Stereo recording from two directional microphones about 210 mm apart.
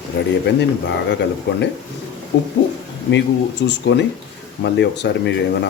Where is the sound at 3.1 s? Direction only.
55° left (ahead or behind).